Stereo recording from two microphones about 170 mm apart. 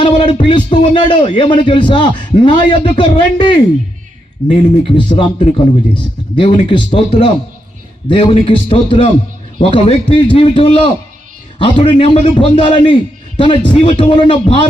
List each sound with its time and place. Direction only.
0.0 s a man's voice: 30° left (ahead or behind)